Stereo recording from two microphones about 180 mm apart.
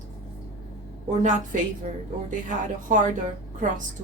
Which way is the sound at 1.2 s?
40° right (ahead or behind).